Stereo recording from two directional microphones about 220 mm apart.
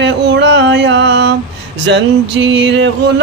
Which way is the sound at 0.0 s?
50° right (ahead or behind).